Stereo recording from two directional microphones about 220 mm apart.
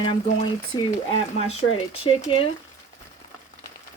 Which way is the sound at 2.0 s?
25° left (ahead or behind).